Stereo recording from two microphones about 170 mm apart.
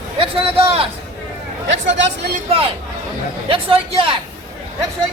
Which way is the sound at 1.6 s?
90° right.